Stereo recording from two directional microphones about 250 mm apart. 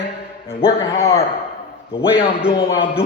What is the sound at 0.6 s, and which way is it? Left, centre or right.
A man's voice, left.